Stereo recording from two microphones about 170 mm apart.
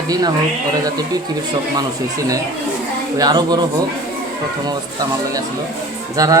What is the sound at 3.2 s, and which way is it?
Speech, 25° right (ahead or behind).